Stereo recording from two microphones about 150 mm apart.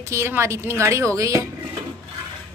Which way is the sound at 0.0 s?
20° right (ahead or behind).